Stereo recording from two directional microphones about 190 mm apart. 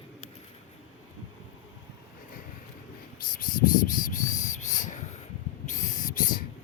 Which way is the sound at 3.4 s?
45° left (ahead or behind).